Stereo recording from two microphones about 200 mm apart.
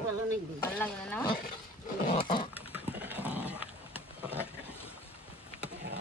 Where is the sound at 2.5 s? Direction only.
10° right (ahead or behind).